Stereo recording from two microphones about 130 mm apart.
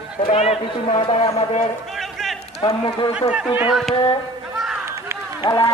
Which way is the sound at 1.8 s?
Centre (ahead or behind).